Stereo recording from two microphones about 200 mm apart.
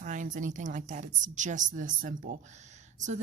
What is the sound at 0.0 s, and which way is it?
A woman's voice, 40° right (ahead or behind).